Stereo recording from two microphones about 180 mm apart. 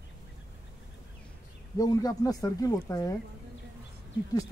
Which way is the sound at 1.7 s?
20° left (ahead or behind).